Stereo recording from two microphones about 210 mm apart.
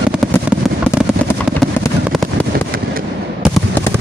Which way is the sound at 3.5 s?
10° left (ahead or behind).